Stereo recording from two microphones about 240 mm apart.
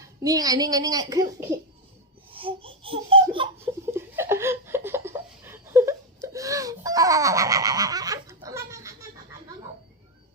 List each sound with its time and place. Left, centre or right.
0.0 s a child's voice: centre
3.9 s laughter: centre